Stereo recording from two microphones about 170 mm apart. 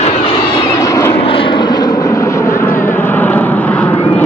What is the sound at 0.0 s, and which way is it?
Vehicle, 35° left (ahead or behind).